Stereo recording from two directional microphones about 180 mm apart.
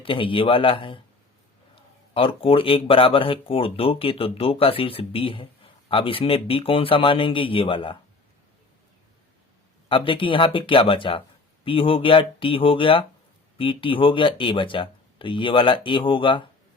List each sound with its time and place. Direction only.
0.0 s speech: 30° left (ahead or behind)
9.9 s speech: 30° left (ahead or behind)